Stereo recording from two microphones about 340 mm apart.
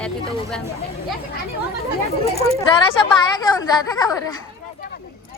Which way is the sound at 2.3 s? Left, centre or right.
Centre.